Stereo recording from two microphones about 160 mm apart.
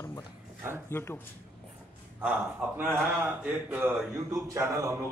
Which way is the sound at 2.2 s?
10° right (ahead or behind).